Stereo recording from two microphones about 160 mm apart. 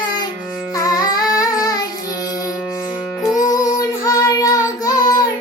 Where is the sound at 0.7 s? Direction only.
20° left (ahead or behind).